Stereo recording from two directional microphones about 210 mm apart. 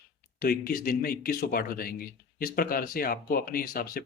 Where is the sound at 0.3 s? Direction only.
45° left (ahead or behind).